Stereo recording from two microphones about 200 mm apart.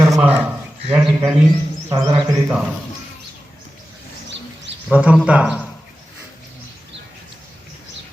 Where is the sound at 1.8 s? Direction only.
10° right (ahead or behind).